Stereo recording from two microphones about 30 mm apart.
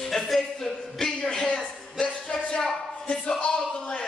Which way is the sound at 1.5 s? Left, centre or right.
Left.